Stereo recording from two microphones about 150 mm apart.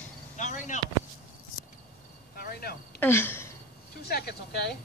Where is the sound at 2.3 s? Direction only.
90° left.